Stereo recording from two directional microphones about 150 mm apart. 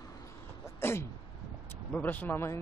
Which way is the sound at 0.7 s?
15° left (ahead or behind).